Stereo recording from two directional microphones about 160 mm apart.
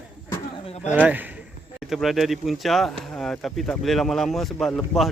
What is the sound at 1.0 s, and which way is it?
Speech, 10° right (ahead or behind).